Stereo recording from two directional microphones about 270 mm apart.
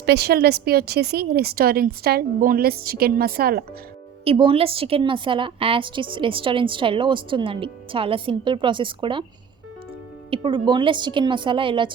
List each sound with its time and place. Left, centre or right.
0.0 s a woman's voice: right
4.2 s a woman's voice: centre
10.2 s speech: centre